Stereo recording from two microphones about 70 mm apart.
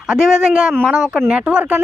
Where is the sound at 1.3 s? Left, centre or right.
Centre.